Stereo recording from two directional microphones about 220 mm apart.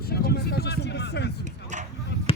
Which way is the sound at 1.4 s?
35° right (ahead or behind).